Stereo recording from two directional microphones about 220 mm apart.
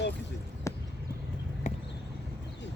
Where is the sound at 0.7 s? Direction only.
15° left (ahead or behind).